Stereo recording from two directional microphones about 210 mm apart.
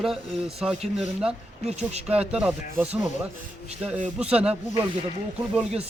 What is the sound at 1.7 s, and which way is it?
Speech, 30° right (ahead or behind).